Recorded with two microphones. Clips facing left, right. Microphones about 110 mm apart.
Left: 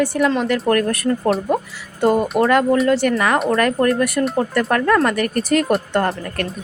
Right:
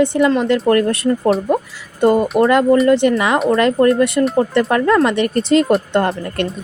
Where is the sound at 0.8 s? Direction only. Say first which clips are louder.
Right 3 dB; 20° right (ahead or behind).